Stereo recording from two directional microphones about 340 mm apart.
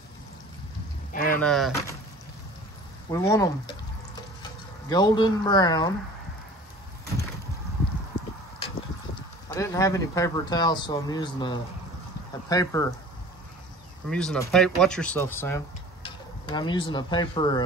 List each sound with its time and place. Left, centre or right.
1.1 s a sound: left
1.4 s speech: centre
3.1 s speech: centre
4.8 s speech: centre
9.5 s speech: centre
14.0 s speech: centre